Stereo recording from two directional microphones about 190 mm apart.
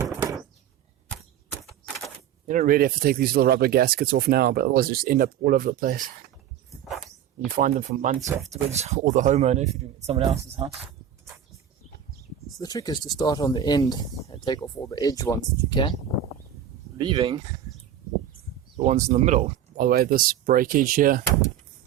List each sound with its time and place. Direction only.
0.0 s a sound: 15° right (ahead or behind)
1.6 s typewriter: centre (ahead or behind)
2.5 s speech: 45° right (ahead or behind)
7.5 s speech: 45° right (ahead or behind)
8.3 s speech: 10° right (ahead or behind)
8.7 s speech: 35° right (ahead or behind)
12.5 s speech: 20° left (ahead or behind)
17.0 s speech: 25° right (ahead or behind)
18.9 s speech: 35° right (ahead or behind)